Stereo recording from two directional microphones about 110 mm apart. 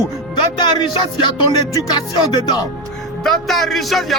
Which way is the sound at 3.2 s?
Centre (ahead or behind).